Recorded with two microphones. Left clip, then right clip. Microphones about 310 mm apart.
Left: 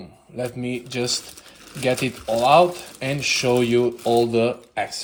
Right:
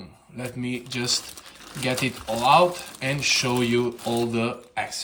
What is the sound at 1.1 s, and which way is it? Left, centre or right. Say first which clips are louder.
Speech: even; centre.